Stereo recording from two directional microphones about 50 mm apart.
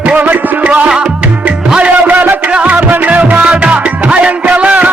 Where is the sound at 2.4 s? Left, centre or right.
Right.